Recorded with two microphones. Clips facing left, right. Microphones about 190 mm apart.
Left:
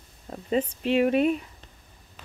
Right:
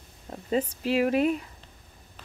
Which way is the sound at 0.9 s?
25° left (ahead or behind).